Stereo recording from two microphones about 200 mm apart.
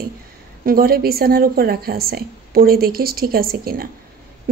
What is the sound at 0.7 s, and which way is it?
A woman's voice, 50° right (ahead or behind).